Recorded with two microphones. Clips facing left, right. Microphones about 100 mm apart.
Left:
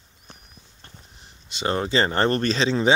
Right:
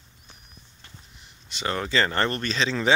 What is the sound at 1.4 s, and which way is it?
Speech, 25° left (ahead or behind).